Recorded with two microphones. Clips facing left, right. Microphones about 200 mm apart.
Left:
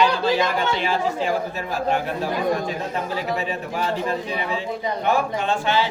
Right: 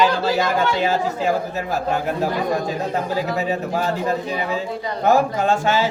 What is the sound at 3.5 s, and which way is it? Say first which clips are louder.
Speech: right 3 dB; 40° right (ahead or behind).